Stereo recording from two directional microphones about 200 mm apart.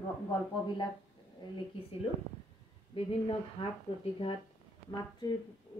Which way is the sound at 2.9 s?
25° left (ahead or behind).